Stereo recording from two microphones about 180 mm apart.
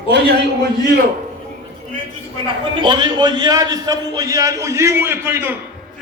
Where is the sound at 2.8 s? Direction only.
25° right (ahead or behind).